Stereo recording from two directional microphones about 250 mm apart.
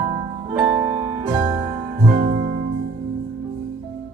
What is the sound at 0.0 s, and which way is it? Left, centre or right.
Music, centre.